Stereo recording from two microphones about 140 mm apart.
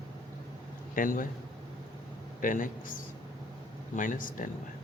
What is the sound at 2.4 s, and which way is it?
Speech, 75° left (ahead or behind).